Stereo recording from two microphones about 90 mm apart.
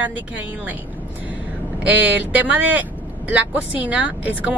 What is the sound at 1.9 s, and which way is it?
Speech, 20° right (ahead or behind).